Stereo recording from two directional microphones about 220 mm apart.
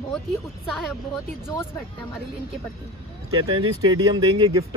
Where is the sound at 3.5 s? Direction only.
20° right (ahead or behind).